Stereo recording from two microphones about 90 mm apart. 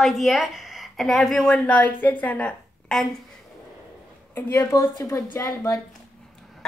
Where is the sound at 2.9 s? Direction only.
5° left (ahead or behind).